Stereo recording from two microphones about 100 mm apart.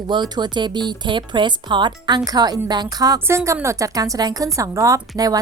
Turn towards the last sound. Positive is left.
turn(degrees=-35)  # may be behind; listen again after turning